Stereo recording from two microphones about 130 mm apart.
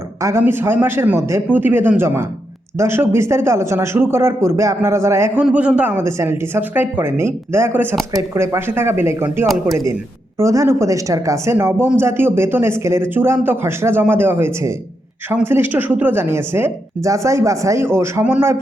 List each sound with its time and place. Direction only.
0.2 s a man's voice: 20° right (ahead or behind)